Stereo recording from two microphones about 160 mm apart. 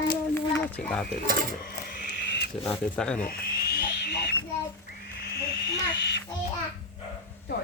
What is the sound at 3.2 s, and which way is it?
Owl, 70° left (ahead or behind).